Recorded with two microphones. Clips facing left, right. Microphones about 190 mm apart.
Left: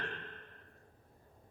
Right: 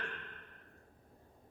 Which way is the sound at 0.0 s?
35° left (ahead or behind).